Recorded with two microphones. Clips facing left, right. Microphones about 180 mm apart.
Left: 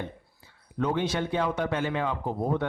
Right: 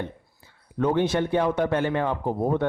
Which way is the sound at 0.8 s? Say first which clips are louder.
Right 5 dB; 55° right (ahead or behind).